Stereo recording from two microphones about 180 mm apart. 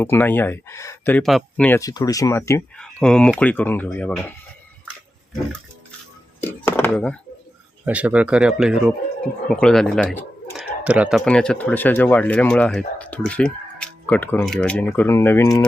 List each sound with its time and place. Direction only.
0.0 s speech: 10° left (ahead or behind)
1.8 s speech: 20° left (ahead or behind)
2.7 s speech: 5° left (ahead or behind)
6.4 s speech: 10° left (ahead or behind)
7.9 s speech: 10° right (ahead or behind)
10.8 s speech: 5° right (ahead or behind)
11.3 s speech: 5° left (ahead or behind)